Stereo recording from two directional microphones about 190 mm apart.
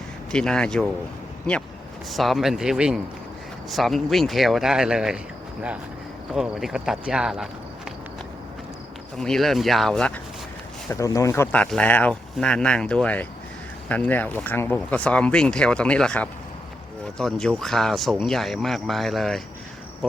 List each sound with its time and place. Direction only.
0.3 s speech: 5° left (ahead or behind)
2.0 s speech: centre (ahead or behind)
6.3 s speech: centre (ahead or behind)
9.1 s speech: centre (ahead or behind)
10.8 s speech: 15° left (ahead or behind)